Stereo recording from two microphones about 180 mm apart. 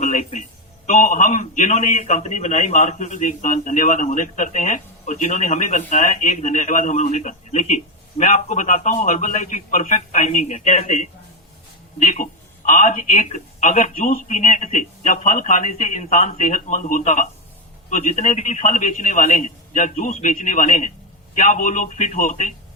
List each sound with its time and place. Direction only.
0.0 s speech: 40° left (ahead or behind)